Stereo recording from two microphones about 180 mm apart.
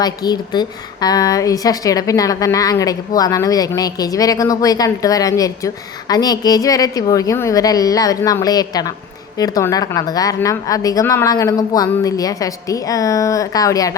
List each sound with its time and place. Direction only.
0.0 s a woman's voice: 20° left (ahead or behind)